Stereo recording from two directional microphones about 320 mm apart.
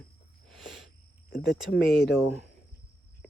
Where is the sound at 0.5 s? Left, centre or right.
Centre.